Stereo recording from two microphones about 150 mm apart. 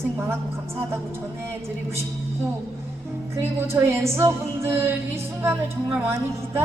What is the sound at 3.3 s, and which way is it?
A woman's voice, 15° right (ahead or behind).